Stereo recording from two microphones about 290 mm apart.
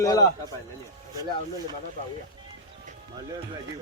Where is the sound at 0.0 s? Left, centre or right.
Centre.